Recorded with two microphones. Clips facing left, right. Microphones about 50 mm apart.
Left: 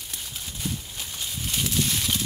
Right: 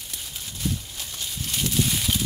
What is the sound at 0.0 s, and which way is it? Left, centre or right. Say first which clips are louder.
Horse: even; centre.